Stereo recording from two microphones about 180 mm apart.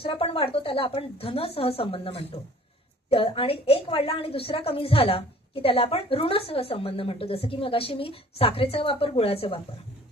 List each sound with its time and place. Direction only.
0.0 s a woman's voice: 30° left (ahead or behind)